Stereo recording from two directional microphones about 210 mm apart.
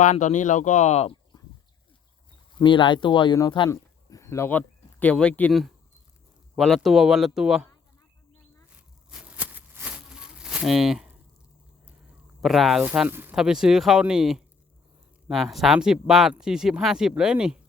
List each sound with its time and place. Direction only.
0.0 s speech: 35° left (ahead or behind)
2.6 s speech: 20° left (ahead or behind); by 7.7 s centre (ahead or behind)
8.7 s a sound: 5° right (ahead or behind)
12.4 s speech: centre (ahead or behind)